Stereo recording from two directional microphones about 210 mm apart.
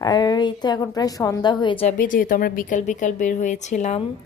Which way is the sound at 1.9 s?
40° left (ahead or behind).